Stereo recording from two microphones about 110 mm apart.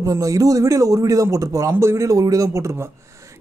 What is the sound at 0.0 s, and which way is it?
A man's voice, 30° right (ahead or behind).